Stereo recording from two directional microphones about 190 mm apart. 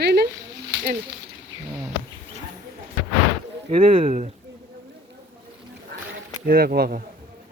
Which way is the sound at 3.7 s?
30° right (ahead or behind).